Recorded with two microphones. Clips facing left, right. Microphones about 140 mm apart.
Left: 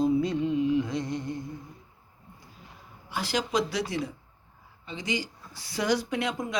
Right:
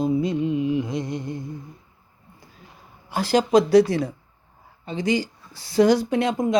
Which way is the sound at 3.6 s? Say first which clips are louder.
Right 18 dB; 60° right (ahead or behind).